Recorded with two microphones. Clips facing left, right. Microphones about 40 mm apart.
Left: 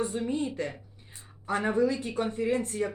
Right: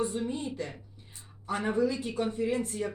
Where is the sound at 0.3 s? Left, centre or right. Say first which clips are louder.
Left 4 dB; left.